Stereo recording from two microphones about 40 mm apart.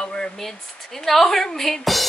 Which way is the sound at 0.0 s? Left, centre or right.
Centre.